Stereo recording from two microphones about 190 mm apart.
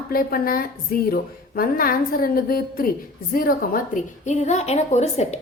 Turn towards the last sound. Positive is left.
turn(degrees=35)  # may be behind; listen again after turning